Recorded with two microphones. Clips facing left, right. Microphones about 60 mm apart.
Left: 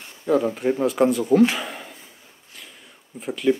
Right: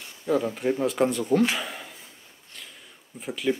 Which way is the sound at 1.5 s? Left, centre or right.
Centre.